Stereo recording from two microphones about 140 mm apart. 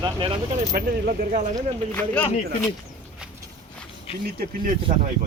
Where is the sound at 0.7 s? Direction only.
90° right; by 1.5 s 65° right (ahead or behind).